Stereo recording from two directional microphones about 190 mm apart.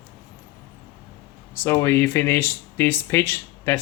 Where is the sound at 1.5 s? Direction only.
15° left (ahead or behind).